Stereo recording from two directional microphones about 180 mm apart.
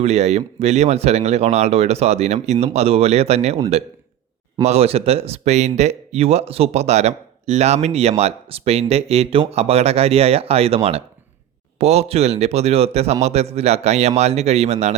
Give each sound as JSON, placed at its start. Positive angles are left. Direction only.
{"t": 0.0, "sound": "speech", "side_deg": -40}
{"t": 4.6, "sound": "speech", "side_deg": -35}